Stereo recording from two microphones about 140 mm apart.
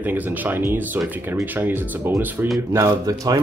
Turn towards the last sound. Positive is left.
turn(degrees=-25)  # may be behind; listen again after turning